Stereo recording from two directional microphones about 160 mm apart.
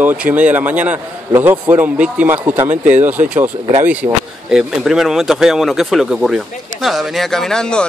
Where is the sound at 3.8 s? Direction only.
10° right (ahead or behind).